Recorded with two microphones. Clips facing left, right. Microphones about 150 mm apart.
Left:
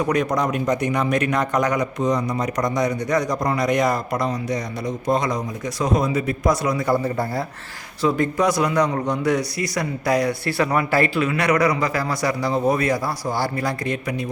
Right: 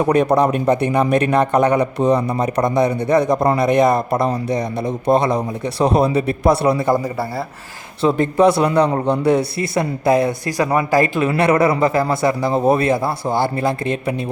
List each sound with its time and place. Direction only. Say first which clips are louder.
0.0 s a man's voice: right 6 dB; 30° right (ahead or behind)
2.0 s a man's voice: right 5 dB; 60° right (ahead or behind)
2.4 s a man's voice: right 5 dB; 30° right (ahead or behind)
4.9 s a man's voice: right 5 dB; 60° right (ahead or behind)
5.2 s a man's voice: right 6 dB; 30° right (ahead or behind)
7.0 s a man's voice: right 1 dB; 5° right (ahead or behind)
8.0 s a man's voice: right 5 dB; 25° right (ahead or behind)